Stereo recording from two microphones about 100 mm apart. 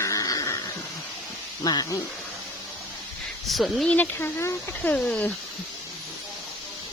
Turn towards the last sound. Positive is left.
turn(degrees=15)  # may be behind; listen again after turning